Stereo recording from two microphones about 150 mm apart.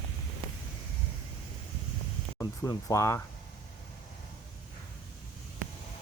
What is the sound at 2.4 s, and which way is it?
Speech, 20° left (ahead or behind).